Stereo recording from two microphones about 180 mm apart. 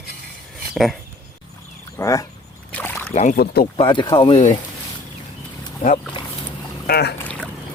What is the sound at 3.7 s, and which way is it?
Speech, 25° left (ahead or behind).